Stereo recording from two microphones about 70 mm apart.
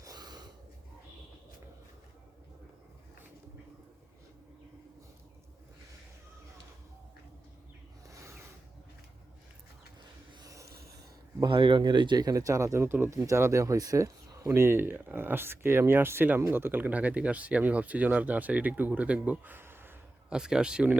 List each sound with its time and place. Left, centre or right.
0.0 s snort: right
8.0 s a sound: right
11.4 s speech: right
14.4 s speech: right
20.3 s speech: centre